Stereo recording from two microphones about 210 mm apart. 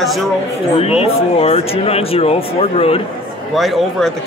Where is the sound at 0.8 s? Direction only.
30° left (ahead or behind).